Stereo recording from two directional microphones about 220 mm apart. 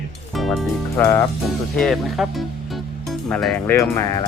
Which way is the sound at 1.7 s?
Centre (ahead or behind).